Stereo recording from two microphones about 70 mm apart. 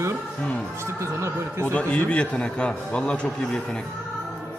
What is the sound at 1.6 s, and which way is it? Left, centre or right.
A man's voice, centre.